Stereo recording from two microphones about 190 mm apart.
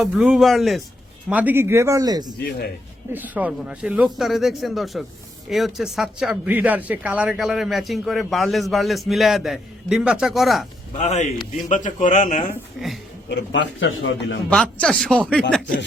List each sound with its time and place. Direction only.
0.0 s speech: 5° right (ahead or behind); by 2.3 s 20° right (ahead or behind)
3.1 s speech: 10° right (ahead or behind)
10.9 s a man's voice: 35° left (ahead or behind)
12.8 s speech: centre (ahead or behind)
13.2 s a man's voice: 65° left (ahead or behind); by 14.3 s 85° left
14.5 s speech: 5° left (ahead or behind)